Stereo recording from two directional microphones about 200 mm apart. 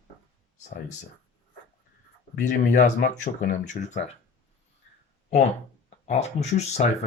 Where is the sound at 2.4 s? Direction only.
40° left (ahead or behind).